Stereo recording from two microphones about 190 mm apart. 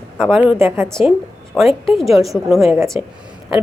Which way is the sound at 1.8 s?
Centre (ahead or behind).